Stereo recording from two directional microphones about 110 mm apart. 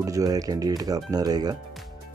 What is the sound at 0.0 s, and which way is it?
Speech, 35° right (ahead or behind).